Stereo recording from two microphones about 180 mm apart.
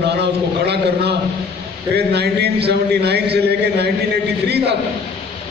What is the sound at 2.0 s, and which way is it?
A man's voice, 65° right (ahead or behind).